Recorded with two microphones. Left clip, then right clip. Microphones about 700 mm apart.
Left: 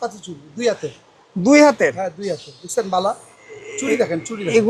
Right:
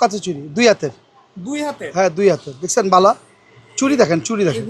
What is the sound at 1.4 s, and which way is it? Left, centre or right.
Speech, left.